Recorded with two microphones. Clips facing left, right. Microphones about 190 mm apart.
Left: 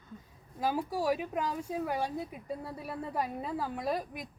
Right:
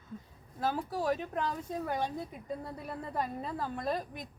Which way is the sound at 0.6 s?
10° left (ahead or behind).